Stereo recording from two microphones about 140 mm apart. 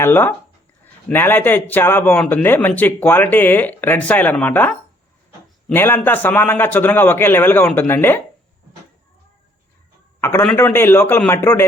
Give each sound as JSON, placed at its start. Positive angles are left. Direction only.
{"t": 0.0, "sound": "speech", "side_deg": 15}
{"t": 10.2, "sound": "a man's voice", "side_deg": 15}